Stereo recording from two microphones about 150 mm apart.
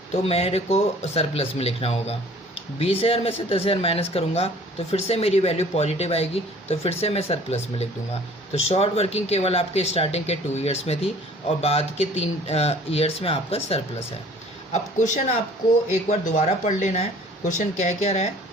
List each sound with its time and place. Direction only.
0.1 s speech: 45° left (ahead or behind)
14.7 s a man's voice: 55° left (ahead or behind)